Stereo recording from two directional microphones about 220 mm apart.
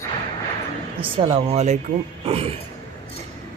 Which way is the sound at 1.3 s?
30° right (ahead or behind).